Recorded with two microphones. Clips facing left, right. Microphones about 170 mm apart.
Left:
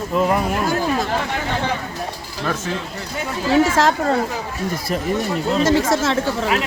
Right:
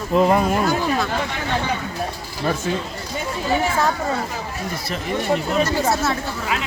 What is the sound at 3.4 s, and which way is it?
Speech, 90° left.